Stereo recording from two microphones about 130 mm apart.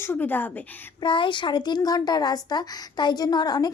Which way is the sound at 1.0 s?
40° left (ahead or behind).